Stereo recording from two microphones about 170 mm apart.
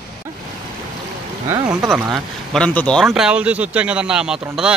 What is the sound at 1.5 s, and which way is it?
Speech, 15° right (ahead or behind).